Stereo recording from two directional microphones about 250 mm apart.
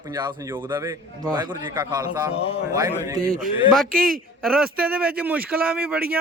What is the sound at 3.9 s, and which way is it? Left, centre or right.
Speech, right.